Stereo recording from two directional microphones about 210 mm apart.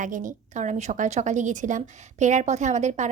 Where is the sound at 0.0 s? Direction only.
40° right (ahead or behind).